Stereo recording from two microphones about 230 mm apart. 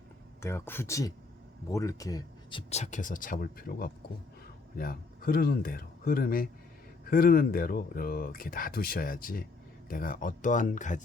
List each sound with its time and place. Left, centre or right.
0.4 s speech: centre; by 11.0 s left